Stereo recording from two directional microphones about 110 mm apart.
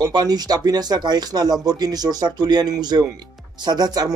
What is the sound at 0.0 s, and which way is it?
Speech, 35° right (ahead or behind).